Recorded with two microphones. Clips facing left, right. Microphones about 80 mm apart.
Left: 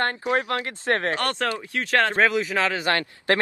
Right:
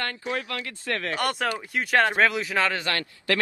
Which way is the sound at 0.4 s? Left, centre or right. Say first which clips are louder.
Left 6 dB; left.